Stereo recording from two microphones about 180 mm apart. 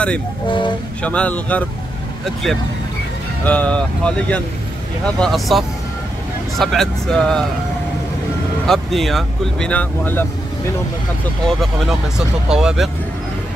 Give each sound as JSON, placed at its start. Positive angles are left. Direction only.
{"t": 0.5, "sound": "speech", "side_deg": 25}
{"t": 1.0, "sound": "speech", "side_deg": 5}
{"t": 3.4, "sound": "speech", "side_deg": 5}
{"t": 8.6, "sound": "speech", "side_deg": 0}
{"t": 11.4, "sound": "speech", "side_deg": 0}